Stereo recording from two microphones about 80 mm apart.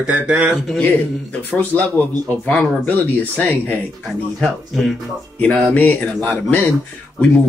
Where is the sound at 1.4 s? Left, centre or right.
Left.